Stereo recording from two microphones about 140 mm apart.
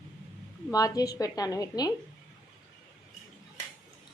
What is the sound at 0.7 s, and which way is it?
A woman's voice, 25° left (ahead or behind).